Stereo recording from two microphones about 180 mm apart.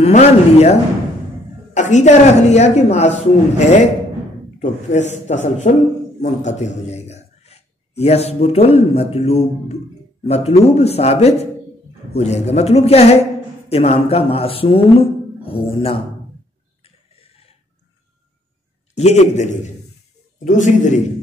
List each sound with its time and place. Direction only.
0.0 s a man's voice: 35° left (ahead or behind)
16.8 s a sound: 35° left (ahead or behind)
18.9 s a woman's voice: 40° left (ahead or behind)